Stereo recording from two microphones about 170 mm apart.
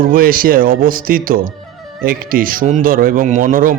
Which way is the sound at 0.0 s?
55° right (ahead or behind).